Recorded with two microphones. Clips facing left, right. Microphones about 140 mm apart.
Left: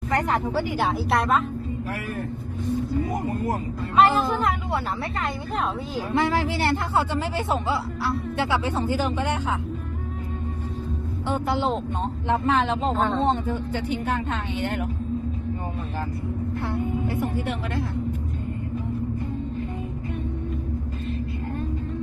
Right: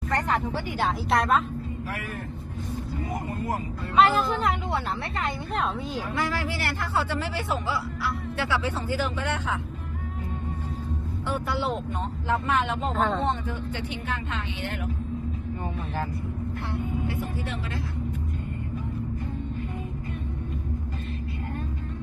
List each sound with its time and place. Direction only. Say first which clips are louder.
0.8 s a woman's voice: right 1 dB; centre (ahead or behind)
3.9 s a woman's voice: left 2 dB; centre (ahead or behind)
6.1 s speech: left 8 dB; 25° left (ahead or behind)
11.3 s speech: left 4 dB; 20° left (ahead or behind)
13.5 s speech: left 6 dB; 35° left (ahead or behind)
17.1 s speech: left 5 dB; 55° left (ahead or behind)